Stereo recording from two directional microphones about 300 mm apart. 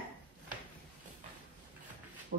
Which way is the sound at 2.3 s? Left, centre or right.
Right.